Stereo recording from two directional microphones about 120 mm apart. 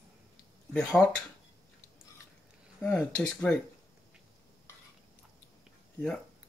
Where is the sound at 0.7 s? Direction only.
5° left (ahead or behind).